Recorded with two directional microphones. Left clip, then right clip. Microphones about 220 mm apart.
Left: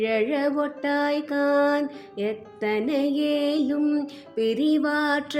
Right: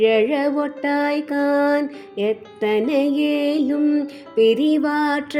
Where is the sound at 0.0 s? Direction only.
15° right (ahead or behind).